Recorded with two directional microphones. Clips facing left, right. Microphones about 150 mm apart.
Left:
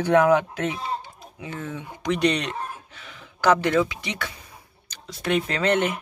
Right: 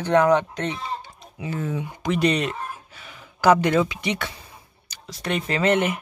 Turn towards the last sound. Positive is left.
turn(degrees=-5)  # may be behind; listen again after turning